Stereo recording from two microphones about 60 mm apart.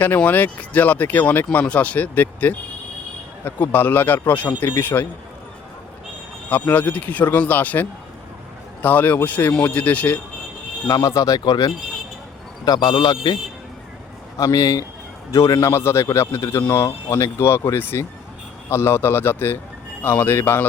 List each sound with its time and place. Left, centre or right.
0.3 s speech: left
6.5 s speech: left
10.8 s a man's voice: left
14.3 s speech: left
15.7 s speech: left
16.6 s speech: left
17.3 s speech: left
17.7 s speech: left